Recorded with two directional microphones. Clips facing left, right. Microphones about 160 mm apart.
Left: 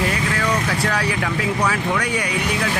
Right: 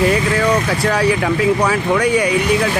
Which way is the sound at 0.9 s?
25° right (ahead or behind).